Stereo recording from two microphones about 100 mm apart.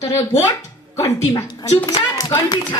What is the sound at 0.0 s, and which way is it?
A woman's voice, 35° left (ahead or behind).